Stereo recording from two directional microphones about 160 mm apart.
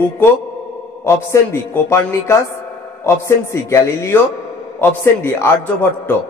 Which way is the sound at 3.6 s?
20° left (ahead or behind).